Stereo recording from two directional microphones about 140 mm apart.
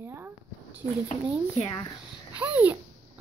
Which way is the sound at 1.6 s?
35° left (ahead or behind).